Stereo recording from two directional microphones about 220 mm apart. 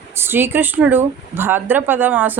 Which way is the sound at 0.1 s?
10° right (ahead or behind).